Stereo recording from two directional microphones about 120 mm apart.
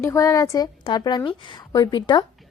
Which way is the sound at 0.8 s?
40° left (ahead or behind).